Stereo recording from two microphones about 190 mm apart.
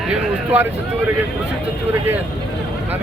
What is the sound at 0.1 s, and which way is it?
Speech, 10° right (ahead or behind).